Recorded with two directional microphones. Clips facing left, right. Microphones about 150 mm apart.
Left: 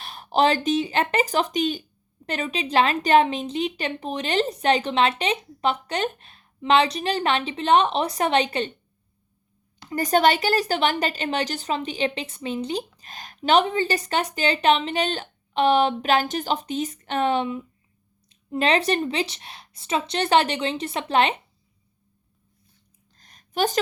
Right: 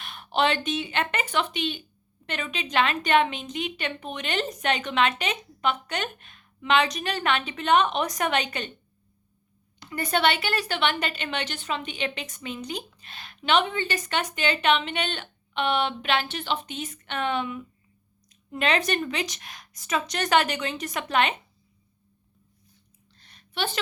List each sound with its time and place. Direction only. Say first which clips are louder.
0.0 s a woman's voice: left 4 dB; 35° left (ahead or behind)
9.9 s a woman's voice: left 5 dB; 40° left (ahead or behind)
23.1 s a sound: left 7 dB; 40° left (ahead or behind)